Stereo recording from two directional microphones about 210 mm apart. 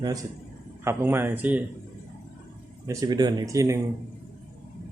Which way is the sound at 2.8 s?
15° right (ahead or behind).